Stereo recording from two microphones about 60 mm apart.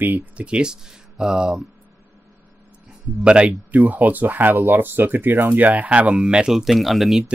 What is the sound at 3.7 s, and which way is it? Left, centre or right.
Speech, right.